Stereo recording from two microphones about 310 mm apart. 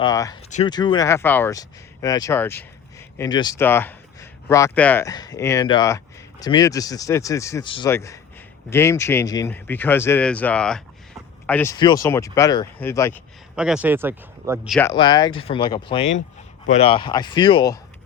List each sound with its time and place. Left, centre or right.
0.0 s speech: centre
13.6 s speech: centre
14.8 s speech: centre